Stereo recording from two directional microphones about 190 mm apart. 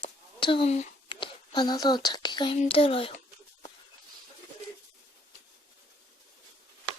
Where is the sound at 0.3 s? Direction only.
25° left (ahead or behind).